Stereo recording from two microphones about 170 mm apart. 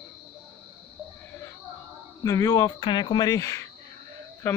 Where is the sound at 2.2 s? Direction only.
20° left (ahead or behind).